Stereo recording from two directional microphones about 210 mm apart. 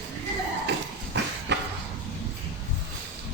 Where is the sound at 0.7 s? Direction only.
55° right (ahead or behind).